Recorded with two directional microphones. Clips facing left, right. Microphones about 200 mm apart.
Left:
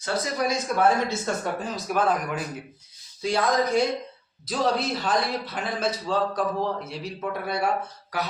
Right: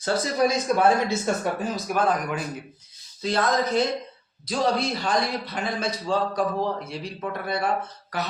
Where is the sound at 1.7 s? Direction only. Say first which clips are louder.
Left 1 dB; centre (ahead or behind).